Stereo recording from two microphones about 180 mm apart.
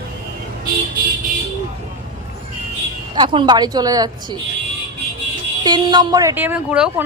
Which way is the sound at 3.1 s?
25° right (ahead or behind).